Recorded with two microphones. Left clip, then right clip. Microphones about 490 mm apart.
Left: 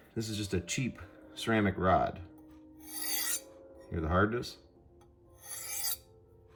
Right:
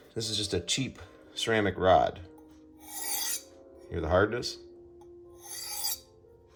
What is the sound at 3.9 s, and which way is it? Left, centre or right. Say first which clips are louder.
Speech: right 4 dB; centre.